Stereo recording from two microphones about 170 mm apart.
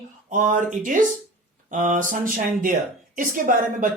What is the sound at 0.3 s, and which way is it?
Speech, 50° right (ahead or behind).